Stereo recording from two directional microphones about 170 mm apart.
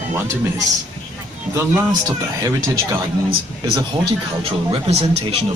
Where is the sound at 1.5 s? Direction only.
15° right (ahead or behind).